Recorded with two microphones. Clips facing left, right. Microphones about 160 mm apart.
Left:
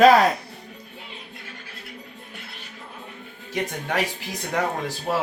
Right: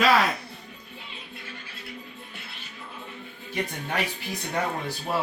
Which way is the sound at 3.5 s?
90° left.